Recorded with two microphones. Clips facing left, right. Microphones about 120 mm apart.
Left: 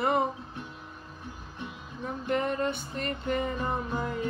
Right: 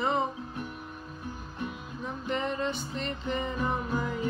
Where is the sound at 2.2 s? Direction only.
50° left (ahead or behind).